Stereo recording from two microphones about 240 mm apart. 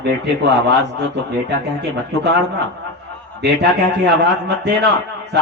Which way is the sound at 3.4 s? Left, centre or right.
Right.